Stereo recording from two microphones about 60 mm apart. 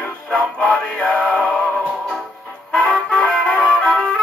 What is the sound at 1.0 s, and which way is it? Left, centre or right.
Music, left.